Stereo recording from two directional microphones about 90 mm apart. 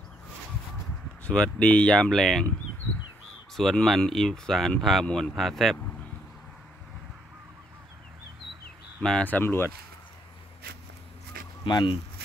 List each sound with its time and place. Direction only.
1.2 s speech: 10° left (ahead or behind)
3.5 s speech: centre (ahead or behind)
9.0 s speech: 10° left (ahead or behind)
11.6 s speech: 65° left (ahead or behind)